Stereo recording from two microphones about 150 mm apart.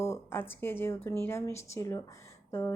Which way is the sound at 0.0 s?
15° left (ahead or behind).